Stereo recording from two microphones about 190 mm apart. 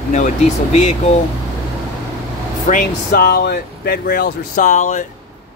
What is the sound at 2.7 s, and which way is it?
Speech, 50° left (ahead or behind).